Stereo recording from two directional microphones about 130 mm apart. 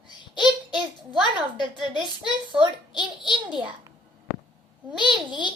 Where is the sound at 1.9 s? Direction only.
35° right (ahead or behind).